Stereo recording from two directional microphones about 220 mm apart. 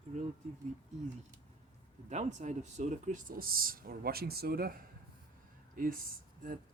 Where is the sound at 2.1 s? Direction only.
30° right (ahead or behind).